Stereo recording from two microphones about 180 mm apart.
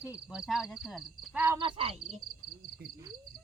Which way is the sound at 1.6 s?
30° right (ahead or behind).